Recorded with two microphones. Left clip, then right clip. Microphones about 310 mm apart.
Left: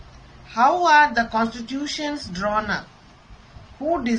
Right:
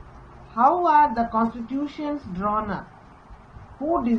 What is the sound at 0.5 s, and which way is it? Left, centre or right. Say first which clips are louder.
Speech: left 2 dB; left.